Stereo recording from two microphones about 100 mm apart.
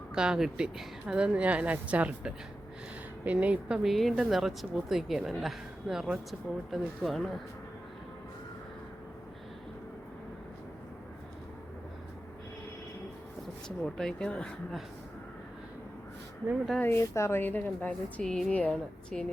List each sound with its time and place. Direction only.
0.1 s speech: 5° right (ahead or behind)
3.8 s a woman's voice: centre (ahead or behind)
13.7 s speech: 5° left (ahead or behind)
16.8 s a woman's voice: 25° left (ahead or behind)
18.2 s a woman's voice: 5° left (ahead or behind)